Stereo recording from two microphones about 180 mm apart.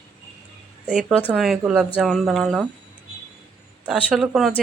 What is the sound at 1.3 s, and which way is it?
Speech, 5° right (ahead or behind).